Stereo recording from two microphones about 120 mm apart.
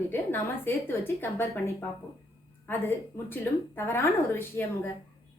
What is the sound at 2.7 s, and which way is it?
Speech, 15° left (ahead or behind).